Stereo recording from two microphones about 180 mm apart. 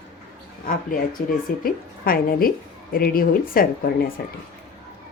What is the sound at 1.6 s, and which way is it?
Speech, 55° left (ahead or behind).